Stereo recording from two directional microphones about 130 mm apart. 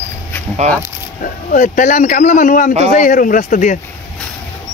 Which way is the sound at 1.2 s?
85° left.